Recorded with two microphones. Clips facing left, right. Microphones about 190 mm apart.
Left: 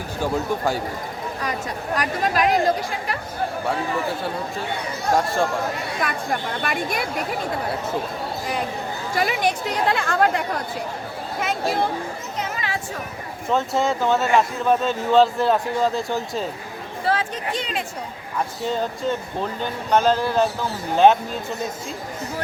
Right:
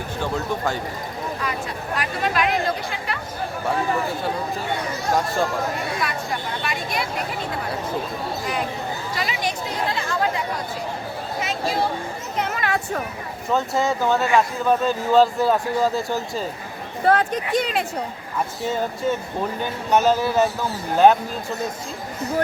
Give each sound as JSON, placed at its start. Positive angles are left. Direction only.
{"t": 0.2, "sound": "speech", "side_deg": 10}
{"t": 2.0, "sound": "speech", "side_deg": 40}
{"t": 5.1, "sound": "speech", "side_deg": 0}
{"t": 6.0, "sound": "a woman's voice", "side_deg": 50}
{"t": 9.1, "sound": "speech", "side_deg": 55}
{"t": 12.4, "sound": "a sound", "side_deg": -60}
{"t": 13.5, "sound": "speech", "side_deg": 0}
{"t": 17.1, "sound": "speech", "side_deg": -50}
{"t": 18.7, "sound": "speech", "side_deg": -10}